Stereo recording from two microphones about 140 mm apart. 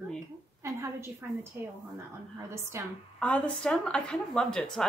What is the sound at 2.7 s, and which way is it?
Speech, 20° right (ahead or behind).